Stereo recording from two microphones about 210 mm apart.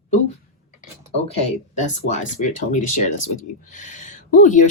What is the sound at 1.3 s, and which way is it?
Speech, 30° left (ahead or behind).